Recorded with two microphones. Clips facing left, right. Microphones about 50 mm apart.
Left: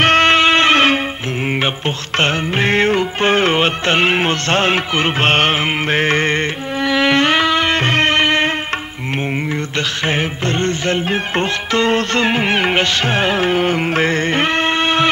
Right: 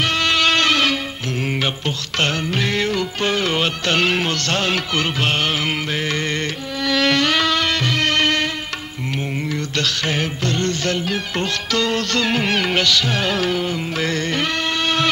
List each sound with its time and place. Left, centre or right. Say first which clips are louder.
0.0 s music: left 7 dB; left
6.9 s music: left 3 dB; left
9.5 s music: left 2 dB; left